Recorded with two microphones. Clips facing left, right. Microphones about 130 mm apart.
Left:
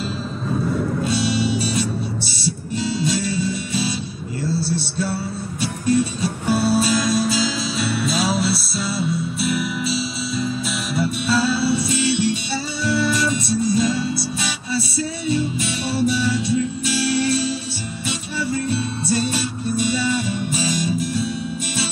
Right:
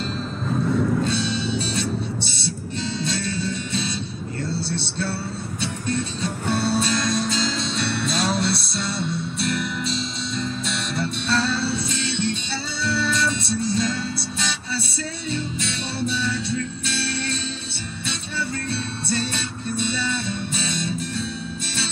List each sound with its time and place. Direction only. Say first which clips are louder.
1.0 s music: left 4 dB; 10° left (ahead or behind)
4.6 s music: left 4 dB; 25° right (ahead or behind)
5.6 s music: left 8 dB; 10° left (ahead or behind)